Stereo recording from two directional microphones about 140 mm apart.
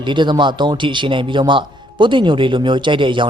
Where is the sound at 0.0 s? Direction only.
35° right (ahead or behind).